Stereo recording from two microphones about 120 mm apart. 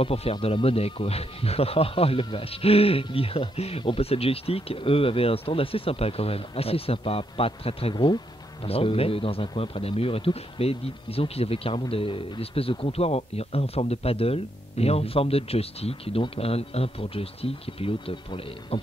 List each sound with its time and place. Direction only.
0.0 s speech: 55° left (ahead or behind)
7.9 s speech: 40° left (ahead or behind)
8.6 s speech: 55° left (ahead or behind)